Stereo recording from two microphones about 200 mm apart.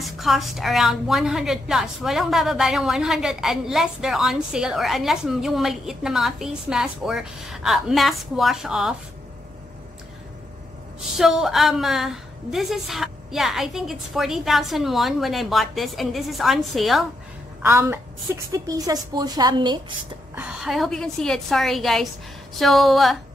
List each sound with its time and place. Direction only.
0.0 s a woman's voice: centre (ahead or behind)
11.1 s a woman's voice: centre (ahead or behind)
17.6 s a woman's voice: 10° right (ahead or behind)
20.3 s a woman's voice: 5° right (ahead or behind)